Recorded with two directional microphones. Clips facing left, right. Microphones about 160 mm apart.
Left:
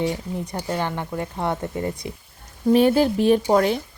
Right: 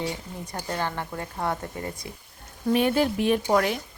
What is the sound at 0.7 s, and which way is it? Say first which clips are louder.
Speech: left 3 dB; 15° left (ahead or behind).